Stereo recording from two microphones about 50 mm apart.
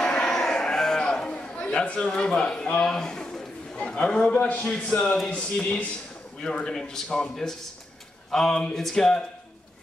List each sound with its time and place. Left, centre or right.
0.0 s music: centre
0.3 s livestock: centre
2.0 s a man's voice: centre
6.6 s a man's voice: centre